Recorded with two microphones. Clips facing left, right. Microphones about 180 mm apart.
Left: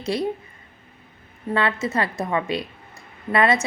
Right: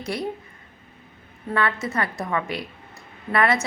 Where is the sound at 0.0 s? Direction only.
25° left (ahead or behind).